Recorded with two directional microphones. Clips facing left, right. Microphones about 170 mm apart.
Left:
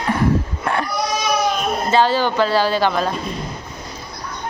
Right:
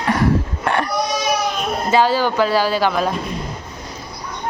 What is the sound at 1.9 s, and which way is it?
Speech, 10° right (ahead or behind).